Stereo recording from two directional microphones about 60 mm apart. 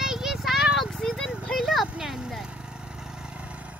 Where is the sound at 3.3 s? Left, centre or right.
Right.